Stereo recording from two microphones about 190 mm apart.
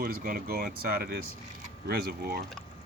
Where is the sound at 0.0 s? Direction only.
50° right (ahead or behind).